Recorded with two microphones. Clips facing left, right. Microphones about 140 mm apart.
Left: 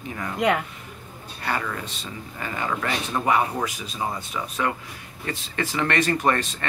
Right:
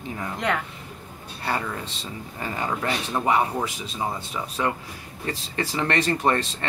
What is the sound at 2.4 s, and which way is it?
Speech, 25° right (ahead or behind).